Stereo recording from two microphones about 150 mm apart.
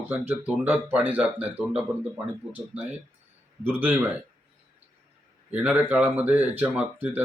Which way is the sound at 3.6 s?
15° right (ahead or behind).